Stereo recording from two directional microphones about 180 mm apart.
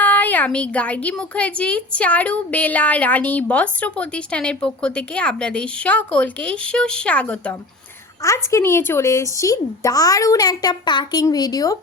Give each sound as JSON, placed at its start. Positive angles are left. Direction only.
{"t": 0.0, "sound": "a woman's voice", "side_deg": 10}